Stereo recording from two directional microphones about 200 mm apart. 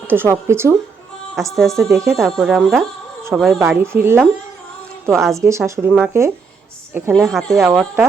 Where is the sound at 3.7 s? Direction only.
10° right (ahead or behind).